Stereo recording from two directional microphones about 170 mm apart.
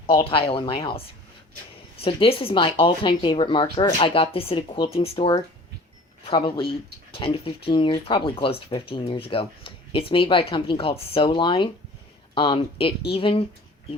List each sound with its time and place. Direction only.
0.2 s speech: 30° left (ahead or behind)